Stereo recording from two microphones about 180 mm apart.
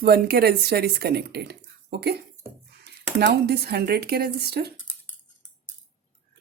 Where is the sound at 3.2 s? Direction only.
65° right (ahead or behind).